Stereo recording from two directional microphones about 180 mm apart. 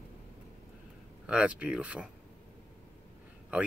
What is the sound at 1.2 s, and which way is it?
Speech, 5° right (ahead or behind).